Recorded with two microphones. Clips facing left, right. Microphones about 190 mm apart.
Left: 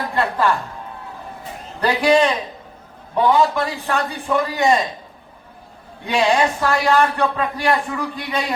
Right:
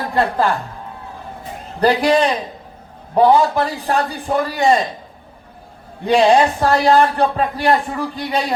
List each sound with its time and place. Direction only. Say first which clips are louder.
0.1 s a woman's voice: right 3 dB; 35° right (ahead or behind)
1.8 s a man's voice: right 1 dB; 35° right (ahead or behind)
6.1 s a man's voice: right 5 dB; 35° right (ahead or behind)